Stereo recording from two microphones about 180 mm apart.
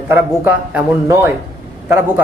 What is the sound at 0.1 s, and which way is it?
A man's voice, 10° right (ahead or behind).